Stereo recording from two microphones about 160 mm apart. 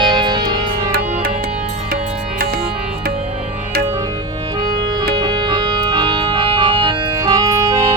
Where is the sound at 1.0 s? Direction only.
50° right (ahead or behind).